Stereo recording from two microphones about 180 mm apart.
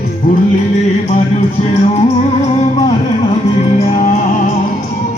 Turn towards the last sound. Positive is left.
turn(degrees=35)  # may be behind; listen again after turning